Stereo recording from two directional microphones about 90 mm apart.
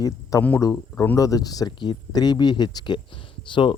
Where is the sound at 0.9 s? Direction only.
20° left (ahead or behind).